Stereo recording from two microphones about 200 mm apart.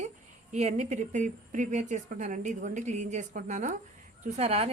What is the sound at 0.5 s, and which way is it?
A woman's voice, 35° right (ahead or behind).